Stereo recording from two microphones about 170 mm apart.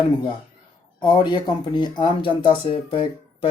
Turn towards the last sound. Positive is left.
turn(degrees=30)  # may be behind; listen again after turning